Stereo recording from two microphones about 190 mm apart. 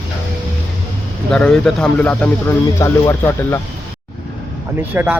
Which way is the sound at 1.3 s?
5° left (ahead or behind).